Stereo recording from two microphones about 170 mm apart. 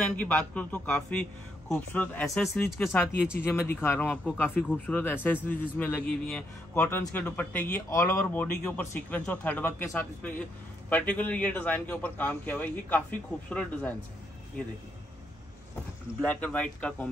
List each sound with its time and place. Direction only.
0.1 s a man's voice: 5° left (ahead or behind)
16.2 s a man's voice: 5° left (ahead or behind)